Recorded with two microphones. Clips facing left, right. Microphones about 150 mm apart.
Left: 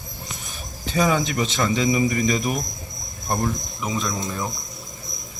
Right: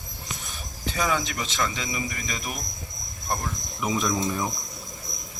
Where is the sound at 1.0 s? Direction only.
25° left (ahead or behind).